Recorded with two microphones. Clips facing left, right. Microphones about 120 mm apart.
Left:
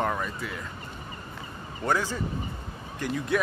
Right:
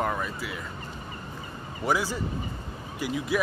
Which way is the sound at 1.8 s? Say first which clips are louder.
Even; 10° right (ahead or behind).